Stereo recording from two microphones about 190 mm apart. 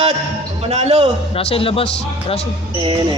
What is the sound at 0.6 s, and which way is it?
Speech, 30° right (ahead or behind).